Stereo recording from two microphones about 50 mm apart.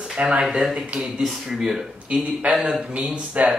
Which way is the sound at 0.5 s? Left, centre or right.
Centre.